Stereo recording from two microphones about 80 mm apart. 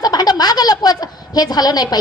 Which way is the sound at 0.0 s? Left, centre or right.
Left.